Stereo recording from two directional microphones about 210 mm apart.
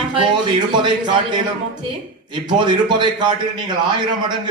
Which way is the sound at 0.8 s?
20° right (ahead or behind).